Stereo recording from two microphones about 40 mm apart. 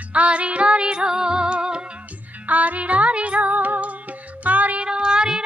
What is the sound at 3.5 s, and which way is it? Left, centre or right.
Music, right.